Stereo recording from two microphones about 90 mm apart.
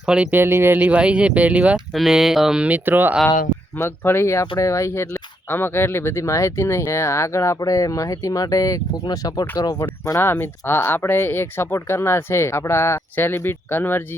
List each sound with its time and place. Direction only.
0.0 s speech: 10° right (ahead or behind)
0.3 s speech: 25° right (ahead or behind)
1.9 s speech: centre (ahead or behind); by 3.2 s 20° right (ahead or behind)
3.8 s speech: 25° left (ahead or behind); by 9.7 s 45° left (ahead or behind)
10.2 s speech: 25° left (ahead or behind)